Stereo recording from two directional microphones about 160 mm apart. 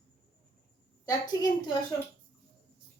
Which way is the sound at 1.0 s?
25° left (ahead or behind).